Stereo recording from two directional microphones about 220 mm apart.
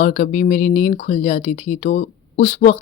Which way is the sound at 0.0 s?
35° left (ahead or behind).